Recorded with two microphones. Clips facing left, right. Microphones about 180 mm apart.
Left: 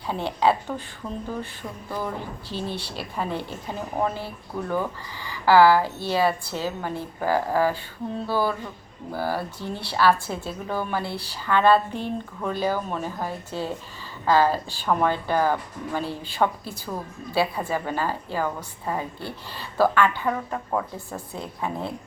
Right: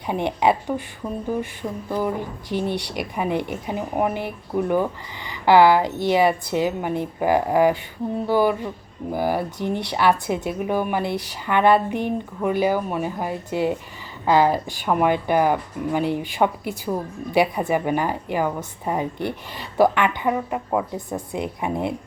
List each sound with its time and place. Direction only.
0.1 s speech: 20° right (ahead or behind)